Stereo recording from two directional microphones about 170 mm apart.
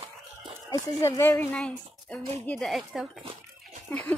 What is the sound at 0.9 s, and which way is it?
Speech, 20° left (ahead or behind).